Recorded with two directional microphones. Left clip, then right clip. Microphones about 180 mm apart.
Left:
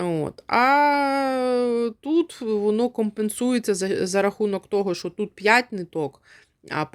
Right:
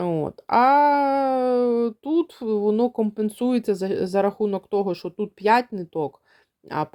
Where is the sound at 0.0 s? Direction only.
5° left (ahead or behind).